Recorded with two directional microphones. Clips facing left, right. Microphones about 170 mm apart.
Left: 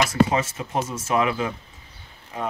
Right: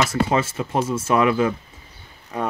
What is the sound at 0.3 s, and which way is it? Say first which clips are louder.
Speech: right 3 dB; 50° right (ahead or behind).